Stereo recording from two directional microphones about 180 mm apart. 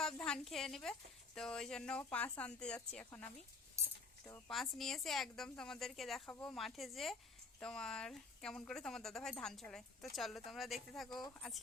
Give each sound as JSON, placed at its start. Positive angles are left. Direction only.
{"t": 0.0, "sound": "a woman's voice", "side_deg": 5}
{"t": 3.8, "sound": "a sound", "side_deg": -15}
{"t": 4.4, "sound": "speech", "side_deg": 0}